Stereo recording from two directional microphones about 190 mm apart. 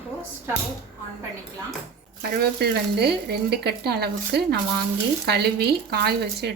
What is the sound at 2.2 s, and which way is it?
Speech, 55° right (ahead or behind).